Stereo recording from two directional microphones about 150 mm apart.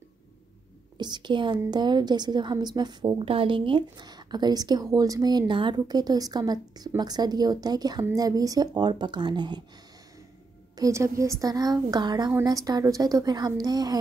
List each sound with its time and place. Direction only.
0.9 s a woman's voice: 30° right (ahead or behind)
10.8 s a woman's voice: 20° right (ahead or behind)